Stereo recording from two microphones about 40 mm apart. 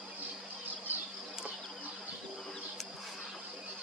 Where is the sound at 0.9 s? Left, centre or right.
Right.